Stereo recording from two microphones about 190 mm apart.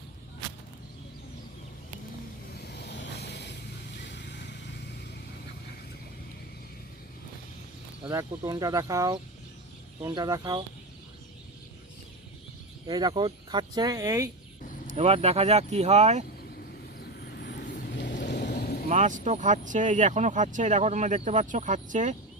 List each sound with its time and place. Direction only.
2.6 s vehicle: 60° left (ahead or behind)
8.0 s speech: 20° right (ahead or behind)
12.9 s speech: 20° right (ahead or behind)
14.8 s speech: 35° right (ahead or behind)
17.2 s vehicle: 60° left (ahead or behind)
18.5 s vehicle: 50° left (ahead or behind)
18.9 s speech: 40° right (ahead or behind)